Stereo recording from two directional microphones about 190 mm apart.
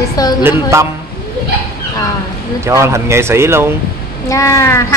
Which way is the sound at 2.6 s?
15° right (ahead or behind).